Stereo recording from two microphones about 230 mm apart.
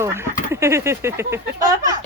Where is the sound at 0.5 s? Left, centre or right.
Centre.